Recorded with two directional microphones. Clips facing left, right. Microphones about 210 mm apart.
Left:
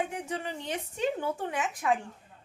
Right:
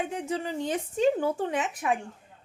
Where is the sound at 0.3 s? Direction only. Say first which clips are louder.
Right 5 dB; 35° right (ahead or behind).